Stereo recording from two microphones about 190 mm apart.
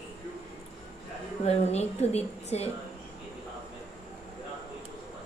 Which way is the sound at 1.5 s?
35° left (ahead or behind).